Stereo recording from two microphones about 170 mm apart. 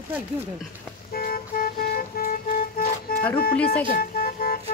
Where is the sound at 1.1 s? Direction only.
60° left (ahead or behind).